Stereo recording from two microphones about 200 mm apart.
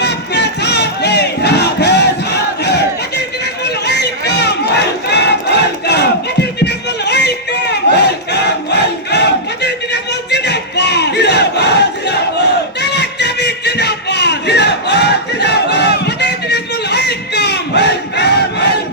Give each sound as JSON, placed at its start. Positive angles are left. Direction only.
{"t": 0.0, "sound": "battle cry", "side_deg": 60}